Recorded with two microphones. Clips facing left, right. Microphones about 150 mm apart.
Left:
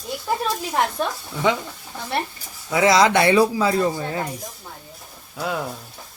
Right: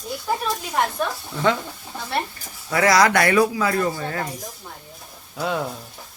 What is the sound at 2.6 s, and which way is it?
Speech, 20° left (ahead or behind).